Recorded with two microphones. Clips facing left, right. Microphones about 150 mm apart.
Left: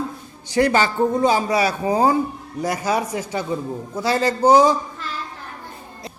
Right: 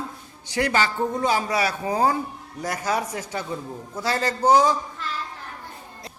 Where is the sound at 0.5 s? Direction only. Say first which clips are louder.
Left 5 dB; 30° left (ahead or behind).